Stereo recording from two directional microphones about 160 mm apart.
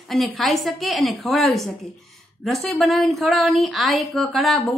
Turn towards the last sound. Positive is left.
turn(degrees=0)  # may be behind; listen again after turning